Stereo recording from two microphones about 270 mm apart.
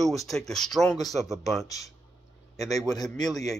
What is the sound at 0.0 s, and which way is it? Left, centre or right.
Speech, centre.